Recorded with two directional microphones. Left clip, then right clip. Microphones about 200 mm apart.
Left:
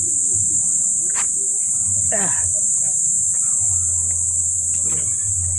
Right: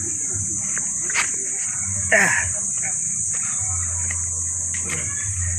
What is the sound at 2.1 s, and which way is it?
Cricket, 15° left (ahead or behind).